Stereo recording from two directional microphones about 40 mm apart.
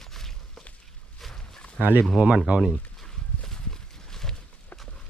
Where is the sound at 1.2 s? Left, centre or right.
Centre.